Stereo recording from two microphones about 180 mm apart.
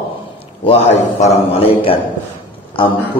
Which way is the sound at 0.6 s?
35° left (ahead or behind).